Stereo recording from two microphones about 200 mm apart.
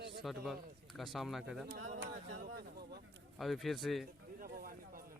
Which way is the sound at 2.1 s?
45° right (ahead or behind).